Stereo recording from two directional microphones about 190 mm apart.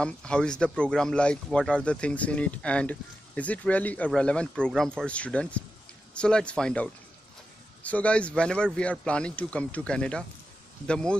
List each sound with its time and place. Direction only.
0.0 s speech: 5° left (ahead or behind)